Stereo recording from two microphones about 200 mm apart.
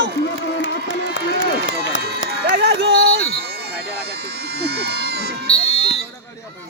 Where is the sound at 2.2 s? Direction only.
55° right (ahead or behind).